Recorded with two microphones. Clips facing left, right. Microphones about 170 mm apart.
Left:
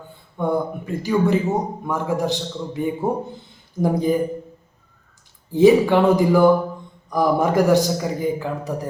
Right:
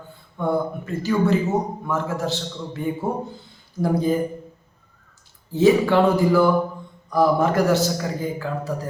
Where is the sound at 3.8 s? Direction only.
15° left (ahead or behind).